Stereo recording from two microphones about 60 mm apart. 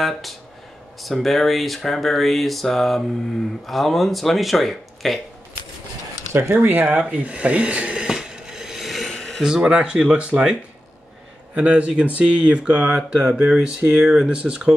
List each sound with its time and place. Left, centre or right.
0.0 s speech: centre
6.5 s speech: right
7.1 s a sound: right; by 9.4 s centre
9.4 s speech: centre
11.5 s speech: right